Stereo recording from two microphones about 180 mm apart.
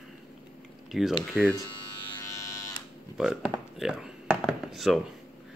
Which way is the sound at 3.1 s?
Centre (ahead or behind).